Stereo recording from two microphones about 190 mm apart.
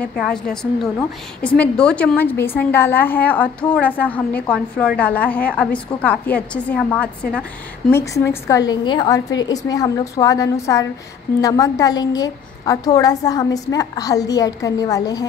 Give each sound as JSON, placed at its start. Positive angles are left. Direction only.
{"t": 0.0, "sound": "a woman's voice", "side_deg": 5}